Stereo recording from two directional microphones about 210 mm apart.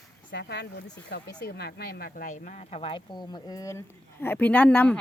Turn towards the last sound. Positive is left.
turn(degrees=5)  # may be behind; listen again after turning